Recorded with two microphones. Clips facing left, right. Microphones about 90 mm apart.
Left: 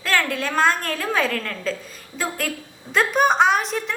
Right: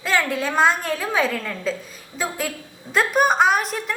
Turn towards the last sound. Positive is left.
turn(degrees=-5)  # may be behind; listen again after turning